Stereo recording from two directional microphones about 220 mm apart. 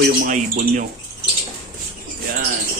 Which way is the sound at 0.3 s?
35° right (ahead or behind).